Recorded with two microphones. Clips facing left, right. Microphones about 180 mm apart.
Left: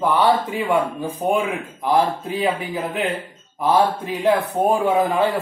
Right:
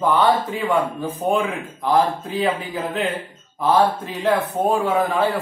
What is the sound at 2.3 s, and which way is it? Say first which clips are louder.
A man's voice: even; 15° left (ahead or behind).